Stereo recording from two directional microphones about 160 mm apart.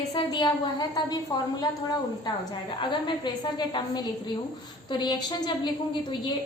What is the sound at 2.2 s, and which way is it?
A woman's voice, 30° left (ahead or behind).